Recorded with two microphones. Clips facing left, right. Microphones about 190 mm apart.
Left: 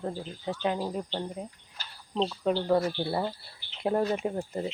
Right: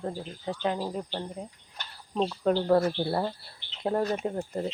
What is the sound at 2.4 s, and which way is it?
Speech, 5° left (ahead or behind).